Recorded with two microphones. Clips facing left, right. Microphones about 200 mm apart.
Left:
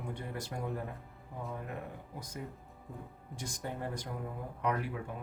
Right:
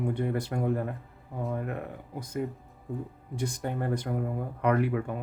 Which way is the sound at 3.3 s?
60° right (ahead or behind).